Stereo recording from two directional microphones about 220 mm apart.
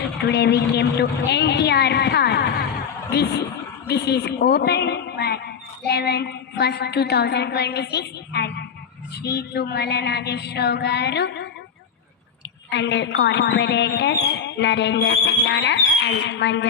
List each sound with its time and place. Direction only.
0.3 s speech: 50° left (ahead or behind)
12.7 s speech: 50° left (ahead or behind)